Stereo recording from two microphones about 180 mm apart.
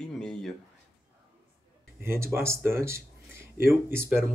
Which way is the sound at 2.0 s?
15° right (ahead or behind).